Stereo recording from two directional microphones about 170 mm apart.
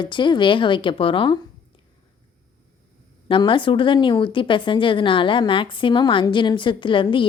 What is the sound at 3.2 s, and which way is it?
Speech, 30° left (ahead or behind).